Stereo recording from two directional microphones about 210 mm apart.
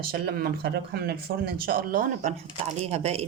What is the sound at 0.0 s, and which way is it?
Speech, 45° right (ahead or behind).